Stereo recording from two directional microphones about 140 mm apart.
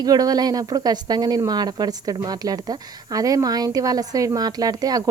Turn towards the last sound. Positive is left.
turn(degrees=-25)  # may be behind; listen again after turning